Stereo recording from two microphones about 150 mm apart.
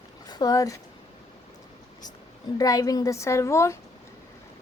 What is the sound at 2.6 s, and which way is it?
A woman's voice, 25° left (ahead or behind).